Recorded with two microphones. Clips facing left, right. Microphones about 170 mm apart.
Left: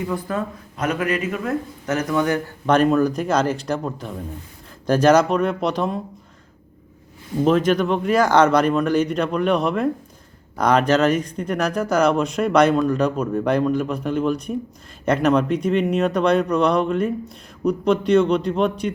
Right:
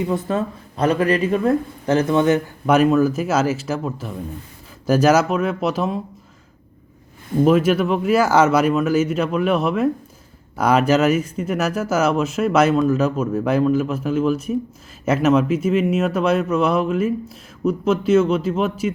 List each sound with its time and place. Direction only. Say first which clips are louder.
0.0 s speech: right 3 dB; 25° right (ahead or behind)
2.6 s speech: right 1 dB; 5° right (ahead or behind)
7.4 s speech: right 1 dB; 5° right (ahead or behind)